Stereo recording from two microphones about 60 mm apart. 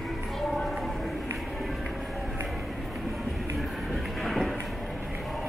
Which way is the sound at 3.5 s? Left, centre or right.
Centre.